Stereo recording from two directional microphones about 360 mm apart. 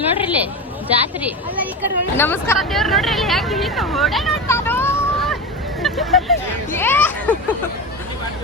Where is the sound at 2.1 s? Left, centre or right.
Centre.